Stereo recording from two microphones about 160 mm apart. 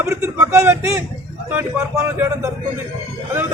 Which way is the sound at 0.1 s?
15° right (ahead or behind).